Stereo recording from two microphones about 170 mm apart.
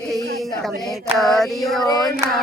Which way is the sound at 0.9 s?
Centre (ahead or behind).